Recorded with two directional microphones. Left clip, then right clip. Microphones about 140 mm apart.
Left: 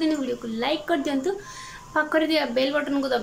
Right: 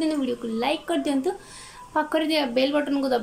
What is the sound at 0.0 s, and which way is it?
A woman's voice, 15° right (ahead or behind).